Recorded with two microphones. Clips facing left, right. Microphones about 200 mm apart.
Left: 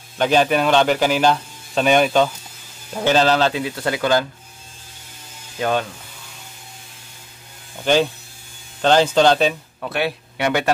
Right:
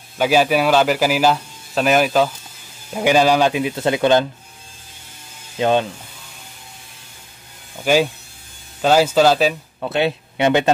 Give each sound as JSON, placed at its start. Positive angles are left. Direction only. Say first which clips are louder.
{"t": 0.2, "sound": "a man's voice", "louder": "right 1 dB", "side_deg": -5}
{"t": 5.6, "sound": "speech", "louder": "right 4 dB", "side_deg": -20}
{"t": 7.8, "sound": "a man's voice", "louder": "right 1 dB", "side_deg": -10}
{"t": 9.8, "sound": "speech", "louder": "right 4 dB", "side_deg": -25}